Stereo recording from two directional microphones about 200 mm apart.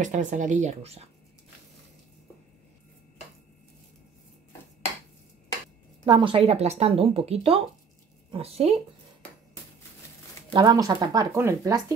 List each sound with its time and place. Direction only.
0.0 s speech: 35° right (ahead or behind)
6.0 s speech: 25° right (ahead or behind)
10.5 s speech: 20° right (ahead or behind)